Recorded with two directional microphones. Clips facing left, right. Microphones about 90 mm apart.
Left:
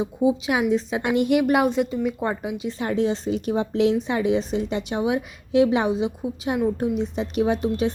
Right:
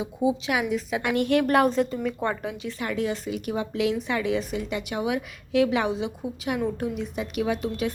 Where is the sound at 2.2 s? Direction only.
20° left (ahead or behind).